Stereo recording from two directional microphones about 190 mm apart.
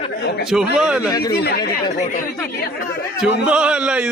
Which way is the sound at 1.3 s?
60° left (ahead or behind).